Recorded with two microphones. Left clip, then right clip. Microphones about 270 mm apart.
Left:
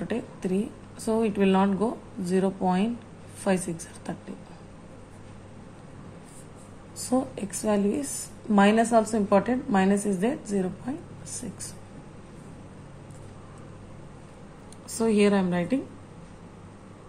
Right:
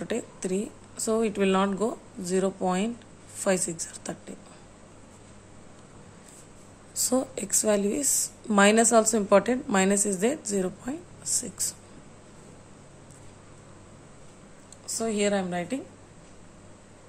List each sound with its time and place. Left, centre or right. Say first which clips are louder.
0.0 s a woman's voice: even; centre
7.1 s a woman's voice: even; centre
15.0 s a woman's voice: left 4 dB; centre